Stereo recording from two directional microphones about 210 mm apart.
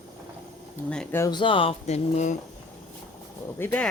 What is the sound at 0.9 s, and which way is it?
Speech, 5° left (ahead or behind).